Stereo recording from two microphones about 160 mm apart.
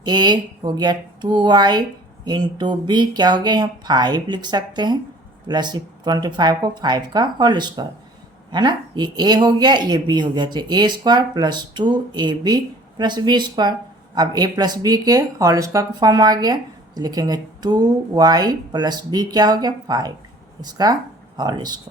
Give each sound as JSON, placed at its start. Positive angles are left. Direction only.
{"t": 0.0, "sound": "speech", "side_deg": -30}